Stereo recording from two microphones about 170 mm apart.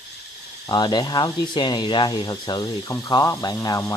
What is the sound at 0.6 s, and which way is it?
Speech, 25° left (ahead or behind).